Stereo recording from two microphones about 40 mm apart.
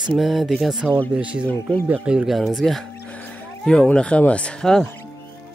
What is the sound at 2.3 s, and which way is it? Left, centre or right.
Speech, centre.